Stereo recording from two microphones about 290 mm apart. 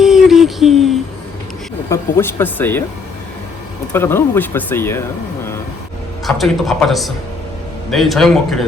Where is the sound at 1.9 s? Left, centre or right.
Centre.